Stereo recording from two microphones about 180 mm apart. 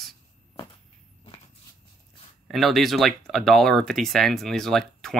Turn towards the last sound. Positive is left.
turn(degrees=0)  # may be behind; listen again after turning